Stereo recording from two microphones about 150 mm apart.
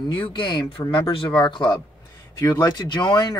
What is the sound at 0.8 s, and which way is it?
Speech, 25° left (ahead or behind).